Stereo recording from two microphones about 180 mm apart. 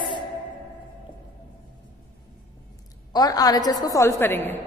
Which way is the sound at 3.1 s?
20° left (ahead or behind).